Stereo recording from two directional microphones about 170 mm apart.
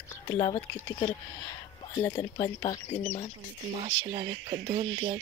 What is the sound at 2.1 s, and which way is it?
Speech, 30° left (ahead or behind).